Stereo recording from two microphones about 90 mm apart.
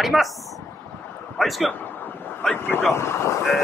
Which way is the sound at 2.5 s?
20° left (ahead or behind).